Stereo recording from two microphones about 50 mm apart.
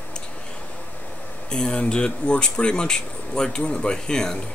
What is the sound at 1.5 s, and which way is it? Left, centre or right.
Speech, centre.